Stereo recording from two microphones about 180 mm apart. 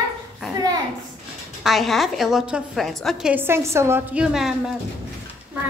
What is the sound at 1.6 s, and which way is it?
A woman's voice, centre (ahead or behind).